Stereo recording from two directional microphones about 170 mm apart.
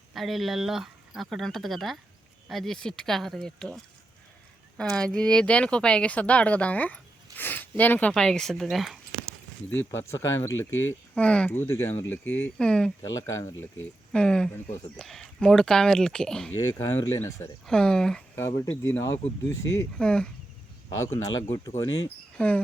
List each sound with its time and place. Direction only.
0.1 s speech: centre (ahead or behind)
4.8 s speech: 5° left (ahead or behind)
9.6 s speech: 15° left (ahead or behind)
13.0 s speech: 20° left (ahead or behind)
14.1 s speech: 5° left (ahead or behind)
16.6 s speech: 15° left (ahead or behind)
17.7 s speech: 5° left (ahead or behind)
18.6 s speech: 15° left (ahead or behind)
20.0 s speech: 5° left (ahead or behind)
20.9 s speech: 15° left (ahead or behind)
22.4 s speech: 5° left (ahead or behind)